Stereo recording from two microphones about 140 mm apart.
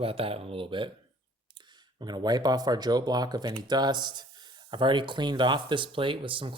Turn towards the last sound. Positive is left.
turn(degrees=-35)  # may be behind; listen again after turning